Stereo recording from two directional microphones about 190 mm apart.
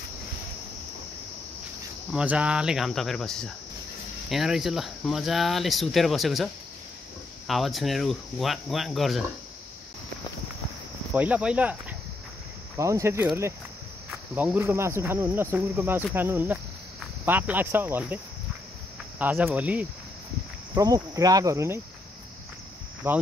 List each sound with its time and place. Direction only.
2.1 s speech: 5° right (ahead or behind)
11.1 s speech: 5° right (ahead or behind)
20.7 s speech: 20° right (ahead or behind)
23.0 s speech: 10° right (ahead or behind)